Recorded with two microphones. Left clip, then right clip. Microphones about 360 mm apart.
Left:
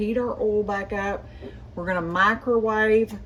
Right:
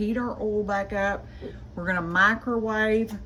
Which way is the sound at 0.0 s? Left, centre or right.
Centre.